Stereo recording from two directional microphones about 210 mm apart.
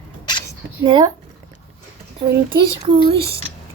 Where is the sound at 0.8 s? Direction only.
20° right (ahead or behind).